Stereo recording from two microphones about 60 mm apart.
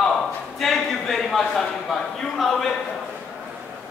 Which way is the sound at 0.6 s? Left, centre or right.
Centre.